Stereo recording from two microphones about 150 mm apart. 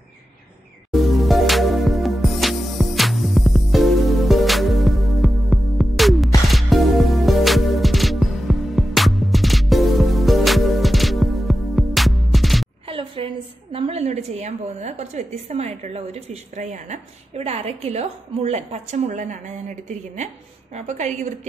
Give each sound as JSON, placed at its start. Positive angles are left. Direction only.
{"t": 0.9, "sound": "music", "side_deg": 0}
{"t": 12.8, "sound": "a woman's voice", "side_deg": -40}